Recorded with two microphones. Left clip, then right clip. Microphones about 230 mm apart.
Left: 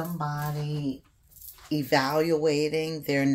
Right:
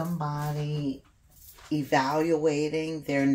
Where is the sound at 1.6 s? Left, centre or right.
Left.